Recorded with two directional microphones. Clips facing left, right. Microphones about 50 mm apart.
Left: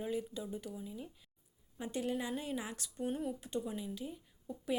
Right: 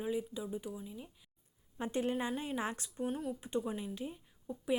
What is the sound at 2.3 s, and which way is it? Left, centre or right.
Speech, centre.